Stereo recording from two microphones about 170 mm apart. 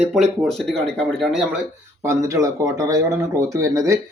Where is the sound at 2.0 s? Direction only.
15° right (ahead or behind).